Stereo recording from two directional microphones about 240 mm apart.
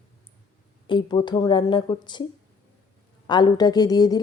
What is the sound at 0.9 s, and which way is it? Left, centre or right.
A woman's voice, centre.